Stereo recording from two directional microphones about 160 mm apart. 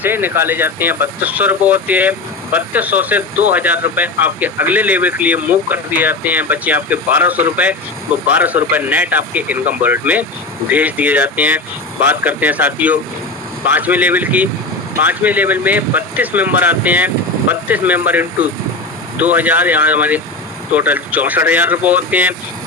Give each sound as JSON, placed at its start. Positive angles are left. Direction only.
{"t": 0.0, "sound": "speech", "side_deg": -10}